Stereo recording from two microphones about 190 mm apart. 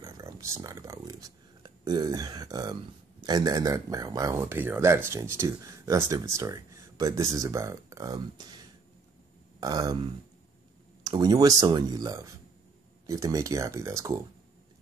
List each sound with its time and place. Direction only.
0.0 s speech: 15° right (ahead or behind)
9.6 s speech: 20° right (ahead or behind)
11.1 s speech: 20° right (ahead or behind)